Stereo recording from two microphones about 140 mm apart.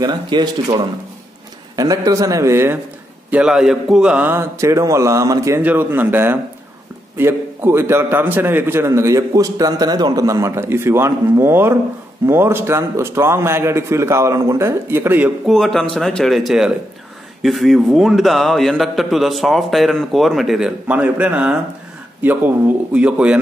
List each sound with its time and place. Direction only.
0.0 s a man's voice: 30° right (ahead or behind)
3.3 s a man's voice: 5° right (ahead or behind)
15.4 s a man's voice: 5° left (ahead or behind)